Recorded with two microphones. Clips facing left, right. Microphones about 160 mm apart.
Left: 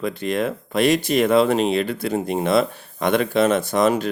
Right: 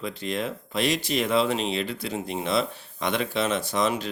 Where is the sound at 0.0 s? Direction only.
55° left (ahead or behind).